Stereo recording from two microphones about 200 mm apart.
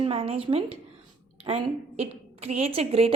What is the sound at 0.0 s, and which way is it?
A woman's voice, 30° right (ahead or behind).